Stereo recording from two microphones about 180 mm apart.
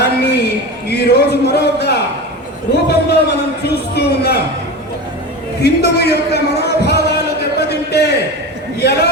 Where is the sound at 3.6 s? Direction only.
65° left (ahead or behind).